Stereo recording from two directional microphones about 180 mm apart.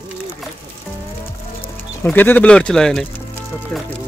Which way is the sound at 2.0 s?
10° left (ahead or behind).